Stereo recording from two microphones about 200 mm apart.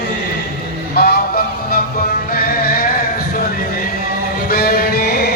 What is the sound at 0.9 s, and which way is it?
Honk, 50° left (ahead or behind).